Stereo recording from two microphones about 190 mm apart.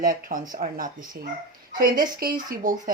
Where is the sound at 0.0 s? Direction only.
45° right (ahead or behind).